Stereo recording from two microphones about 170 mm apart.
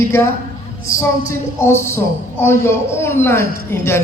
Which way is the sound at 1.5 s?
15° left (ahead or behind).